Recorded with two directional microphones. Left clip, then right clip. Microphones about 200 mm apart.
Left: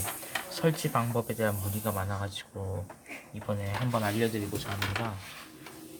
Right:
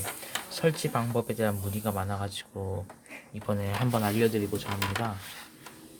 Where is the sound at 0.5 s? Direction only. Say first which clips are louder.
Right 1 dB; 15° right (ahead or behind).